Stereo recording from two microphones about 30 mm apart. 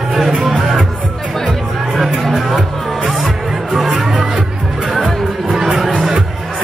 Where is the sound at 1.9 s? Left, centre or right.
Centre.